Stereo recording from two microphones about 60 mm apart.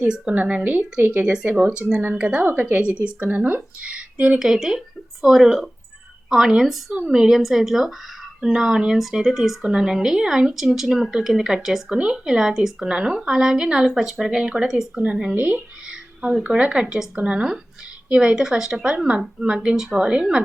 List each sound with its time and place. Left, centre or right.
0.3 s a woman's voice: right
2.5 s a woman's voice: right
4.4 s a woman's voice: centre
15.4 s a woman's voice: right
15.9 s a woman's voice: centre